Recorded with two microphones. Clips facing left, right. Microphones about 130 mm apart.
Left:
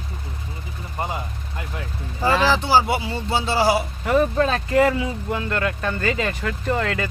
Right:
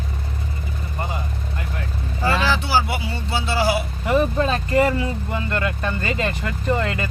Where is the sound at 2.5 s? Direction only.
25° left (ahead or behind).